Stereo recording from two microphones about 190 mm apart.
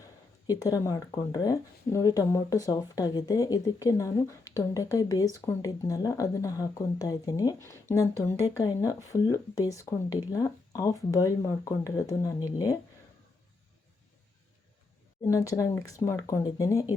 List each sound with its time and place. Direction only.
0.6 s speech: 20° left (ahead or behind)
15.3 s speech: 15° left (ahead or behind)